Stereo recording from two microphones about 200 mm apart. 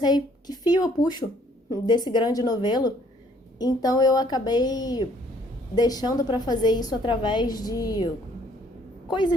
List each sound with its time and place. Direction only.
0.0 s a woman's voice: 20° left (ahead or behind)